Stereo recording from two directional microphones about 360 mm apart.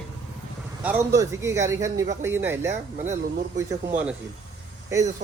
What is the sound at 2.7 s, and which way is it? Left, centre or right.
Speech, centre.